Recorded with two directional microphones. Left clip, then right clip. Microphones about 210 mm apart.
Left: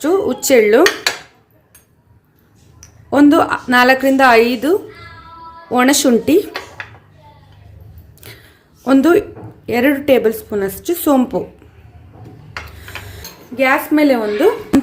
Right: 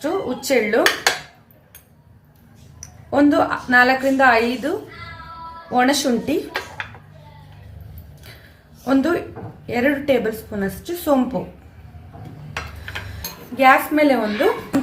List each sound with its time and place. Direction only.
0.0 s speech: 55° left (ahead or behind)
3.1 s a woman's voice: 55° left (ahead or behind)
5.7 s a woman's voice: 55° left (ahead or behind)
8.2 s a sound: 50° left (ahead or behind)
8.8 s a woman's voice: 50° left (ahead or behind)
13.6 s a woman's voice: 25° left (ahead or behind)
14.7 s a sound: centre (ahead or behind)